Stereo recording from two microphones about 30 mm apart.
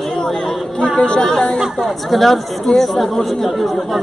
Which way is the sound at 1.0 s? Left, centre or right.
Left.